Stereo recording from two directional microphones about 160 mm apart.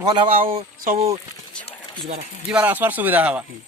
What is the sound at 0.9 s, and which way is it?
Speech, 55° right (ahead or behind).